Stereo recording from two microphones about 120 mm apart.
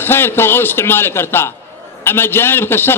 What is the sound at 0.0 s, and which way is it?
A man's voice, 20° left (ahead or behind).